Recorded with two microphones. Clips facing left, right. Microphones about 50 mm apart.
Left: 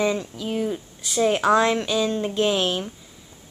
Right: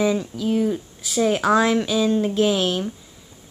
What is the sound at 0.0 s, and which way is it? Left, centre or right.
Speech, centre.